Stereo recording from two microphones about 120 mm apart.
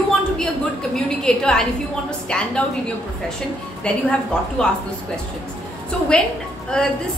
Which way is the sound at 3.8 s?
10° left (ahead or behind).